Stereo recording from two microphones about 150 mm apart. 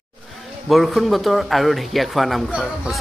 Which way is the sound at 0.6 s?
Centre (ahead or behind).